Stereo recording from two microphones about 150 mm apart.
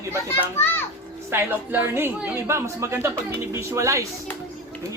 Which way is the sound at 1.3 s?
15° right (ahead or behind).